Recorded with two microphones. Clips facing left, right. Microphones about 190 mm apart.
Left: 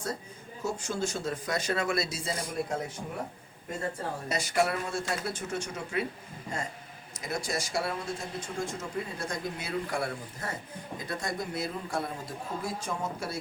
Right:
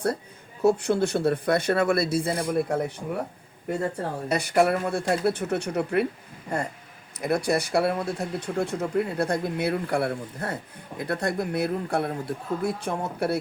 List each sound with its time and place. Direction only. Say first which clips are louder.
0.6 s speech: right 11 dB; 60° right (ahead or behind)
4.3 s speech: right 7 dB; 60° right (ahead or behind)
7.2 s speech: right 10 dB; 60° right (ahead or behind)